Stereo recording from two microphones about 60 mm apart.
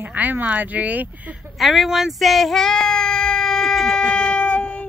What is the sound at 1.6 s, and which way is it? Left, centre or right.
Child singing, centre.